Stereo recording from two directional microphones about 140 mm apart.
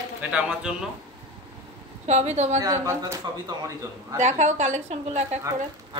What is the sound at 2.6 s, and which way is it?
Speech, 20° right (ahead or behind).